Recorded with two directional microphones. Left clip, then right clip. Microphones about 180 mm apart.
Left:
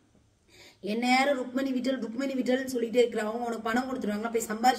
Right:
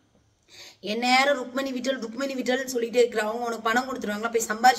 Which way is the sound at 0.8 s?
10° left (ahead or behind).